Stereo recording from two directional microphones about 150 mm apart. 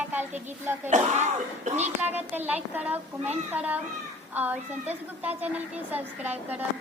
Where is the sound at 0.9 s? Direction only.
50° right (ahead or behind).